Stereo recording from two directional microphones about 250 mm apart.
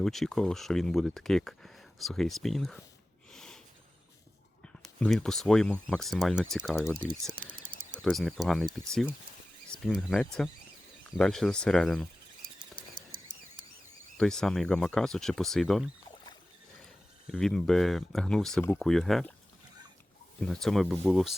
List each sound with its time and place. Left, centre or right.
0.0 s speech: centre
3.3 s a sound: centre
4.6 s speech: centre
7.6 s a sound: centre
8.7 s speech: centre
12.7 s a sound: right
14.2 s speech: centre
17.3 s speech: centre
20.4 s speech: centre